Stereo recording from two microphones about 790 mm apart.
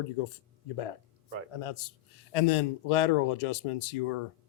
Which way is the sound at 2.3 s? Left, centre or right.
Left.